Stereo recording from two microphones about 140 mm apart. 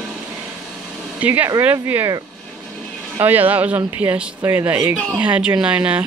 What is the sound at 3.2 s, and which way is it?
Speech, 15° right (ahead or behind).